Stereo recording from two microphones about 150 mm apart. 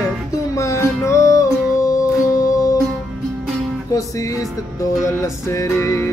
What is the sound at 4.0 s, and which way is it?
Music, 20° left (ahead or behind).